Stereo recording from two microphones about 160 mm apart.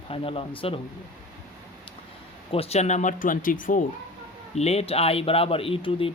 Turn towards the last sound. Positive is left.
turn(degrees=35)  # may be behind; listen again after turning